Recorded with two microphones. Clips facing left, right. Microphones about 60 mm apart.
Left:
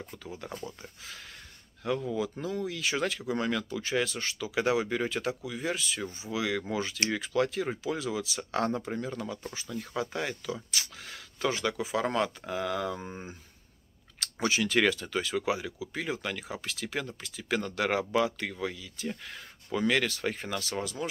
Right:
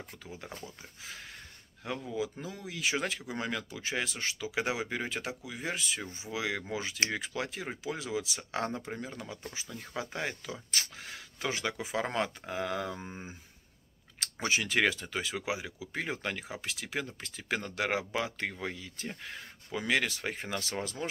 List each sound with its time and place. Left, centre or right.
1.9 s speech: centre
14.2 s speech: right
19.2 s speech: centre